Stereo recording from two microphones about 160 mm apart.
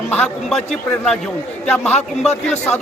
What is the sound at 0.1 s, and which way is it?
Speech, 10° left (ahead or behind).